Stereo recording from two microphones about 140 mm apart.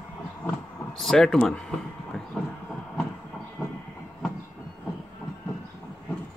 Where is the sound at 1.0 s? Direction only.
5° left (ahead or behind).